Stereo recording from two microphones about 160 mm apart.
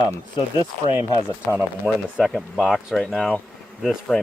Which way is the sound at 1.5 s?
10° right (ahead or behind).